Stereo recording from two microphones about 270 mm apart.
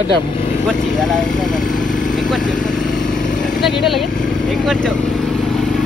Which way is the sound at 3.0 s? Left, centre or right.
Left.